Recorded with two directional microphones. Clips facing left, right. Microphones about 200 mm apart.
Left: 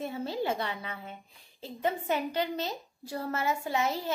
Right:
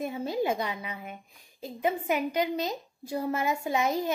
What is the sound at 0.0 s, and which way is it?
A woman's voice, 15° right (ahead or behind).